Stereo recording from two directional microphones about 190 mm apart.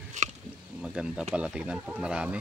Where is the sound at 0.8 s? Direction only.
5° right (ahead or behind).